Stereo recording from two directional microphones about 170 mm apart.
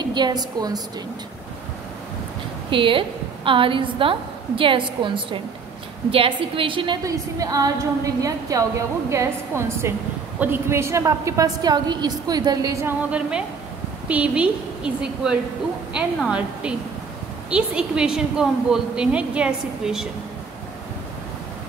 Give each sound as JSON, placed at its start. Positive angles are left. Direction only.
{"t": 0.1, "sound": "a woman's voice", "side_deg": -25}
{"t": 2.7, "sound": "a woman's voice", "side_deg": -30}
{"t": 14.0, "sound": "a woman's voice", "side_deg": -5}